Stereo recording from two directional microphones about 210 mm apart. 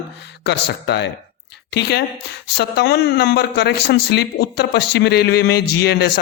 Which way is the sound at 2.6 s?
50° left (ahead or behind).